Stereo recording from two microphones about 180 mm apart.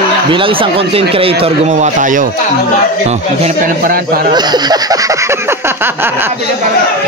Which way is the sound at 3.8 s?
55° right (ahead or behind).